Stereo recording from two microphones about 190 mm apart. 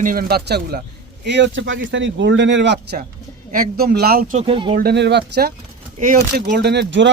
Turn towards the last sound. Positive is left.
turn(degrees=-70)  # may be behind; listen again after turning